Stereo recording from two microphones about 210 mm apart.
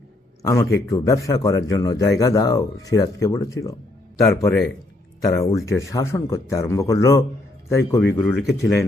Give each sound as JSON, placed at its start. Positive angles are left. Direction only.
{"t": 0.4, "sound": "speech", "side_deg": 15}
{"t": 8.2, "sound": "speech", "side_deg": 0}